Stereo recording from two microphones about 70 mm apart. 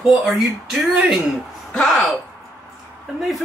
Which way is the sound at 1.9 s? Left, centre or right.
Centre.